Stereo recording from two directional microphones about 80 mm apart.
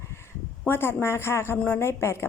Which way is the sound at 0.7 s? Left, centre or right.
Left.